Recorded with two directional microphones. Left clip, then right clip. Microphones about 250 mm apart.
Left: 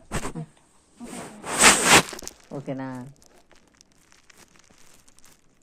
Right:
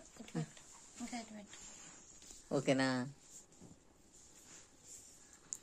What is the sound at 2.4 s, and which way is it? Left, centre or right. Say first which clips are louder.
Speech: right 1 dB; right.